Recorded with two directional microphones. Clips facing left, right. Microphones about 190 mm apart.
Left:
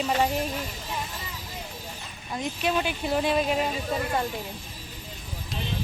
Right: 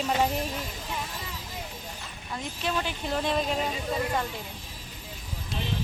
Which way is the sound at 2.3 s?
15° left (ahead or behind).